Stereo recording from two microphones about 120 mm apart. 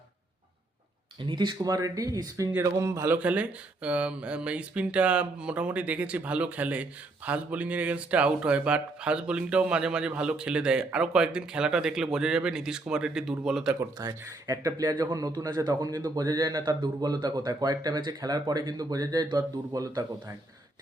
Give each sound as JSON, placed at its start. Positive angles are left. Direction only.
{"t": 1.2, "sound": "a man's voice", "side_deg": -40}
{"t": 3.2, "sound": "speech", "side_deg": -10}
{"t": 14.0, "sound": "speech", "side_deg": -30}